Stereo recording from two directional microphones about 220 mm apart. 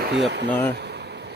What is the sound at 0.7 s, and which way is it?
Bee, 50° right (ahead or behind).